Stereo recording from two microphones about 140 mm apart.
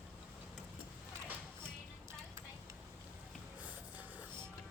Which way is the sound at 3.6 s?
10° right (ahead or behind).